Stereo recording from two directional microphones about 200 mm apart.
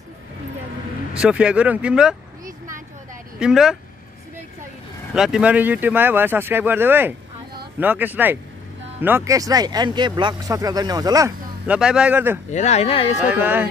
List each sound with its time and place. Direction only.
1.1 s speech: 5° right (ahead or behind)
3.3 s speech: 5° right (ahead or behind)
5.1 s speech: 5° right (ahead or behind)
12.4 s speech: 35° left (ahead or behind)
13.2 s speech: 5° right (ahead or behind)